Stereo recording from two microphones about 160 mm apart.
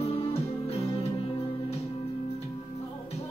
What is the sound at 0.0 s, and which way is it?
Music, 40° left (ahead or behind).